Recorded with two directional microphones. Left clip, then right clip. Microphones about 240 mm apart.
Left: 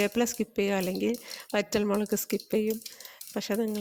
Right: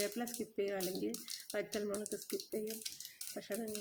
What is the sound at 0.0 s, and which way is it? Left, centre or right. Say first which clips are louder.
Speech: left 13 dB; left.